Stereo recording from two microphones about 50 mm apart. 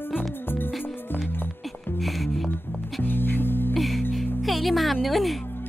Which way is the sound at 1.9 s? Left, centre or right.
Centre.